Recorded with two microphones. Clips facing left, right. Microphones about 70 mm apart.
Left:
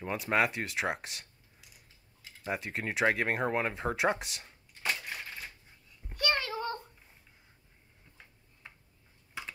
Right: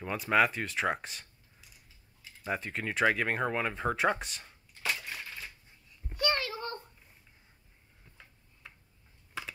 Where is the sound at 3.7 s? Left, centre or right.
Centre.